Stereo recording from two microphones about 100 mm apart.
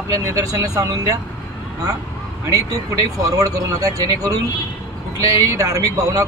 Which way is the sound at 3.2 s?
35° right (ahead or behind).